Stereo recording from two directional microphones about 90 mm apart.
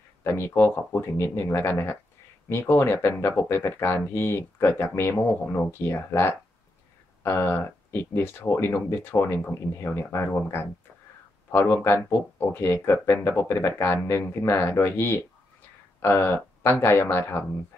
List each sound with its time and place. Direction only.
0.2 s speech: 30° left (ahead or behind)
0.7 s speech: 20° left (ahead or behind)
1.1 s speech: 30° left (ahead or behind); by 12.5 s 15° left (ahead or behind)
12.5 s speech: 30° left (ahead or behind)